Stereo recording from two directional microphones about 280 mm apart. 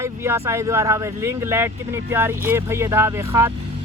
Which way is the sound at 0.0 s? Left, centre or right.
Centre.